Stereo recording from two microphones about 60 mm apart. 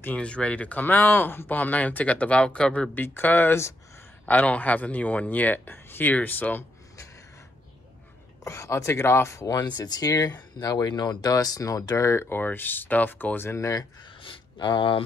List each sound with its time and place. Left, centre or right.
0.0 s speech: left
2.9 s speech: left
8.5 s speech: left
12.1 s speech: left
13.5 s speech: left